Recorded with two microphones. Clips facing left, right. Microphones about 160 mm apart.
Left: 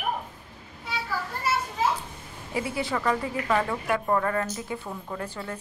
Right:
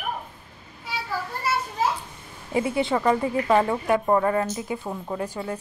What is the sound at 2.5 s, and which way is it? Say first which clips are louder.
A woman's voice: right 6 dB; 25° right (ahead or behind).